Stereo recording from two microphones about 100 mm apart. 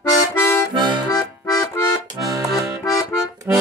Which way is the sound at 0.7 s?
50° right (ahead or behind).